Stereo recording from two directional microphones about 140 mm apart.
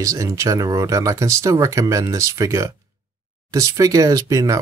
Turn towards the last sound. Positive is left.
turn(degrees=-25)  # may be behind; listen again after turning